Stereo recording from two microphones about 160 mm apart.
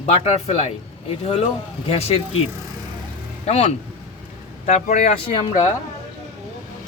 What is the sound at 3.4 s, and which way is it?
A man's voice, 40° left (ahead or behind).